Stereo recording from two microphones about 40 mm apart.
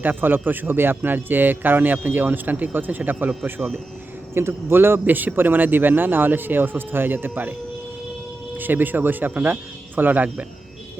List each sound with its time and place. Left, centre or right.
0.0 s speech: right
4.4 s speech: right
5.0 s a man's voice: right
5.3 s speech: right
8.5 s a man's voice: right